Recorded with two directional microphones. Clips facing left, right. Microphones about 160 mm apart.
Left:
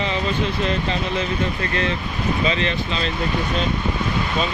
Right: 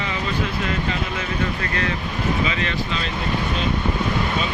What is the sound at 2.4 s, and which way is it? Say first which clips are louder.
Speech: left 3 dB; 25° left (ahead or behind).